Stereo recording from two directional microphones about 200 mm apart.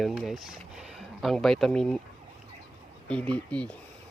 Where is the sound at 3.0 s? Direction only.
5° left (ahead or behind).